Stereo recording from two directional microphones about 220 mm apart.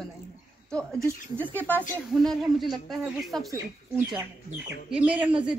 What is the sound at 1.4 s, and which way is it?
A man's voice, 10° left (ahead or behind).